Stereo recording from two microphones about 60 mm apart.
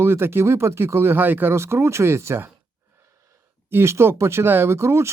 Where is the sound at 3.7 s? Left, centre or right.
Right.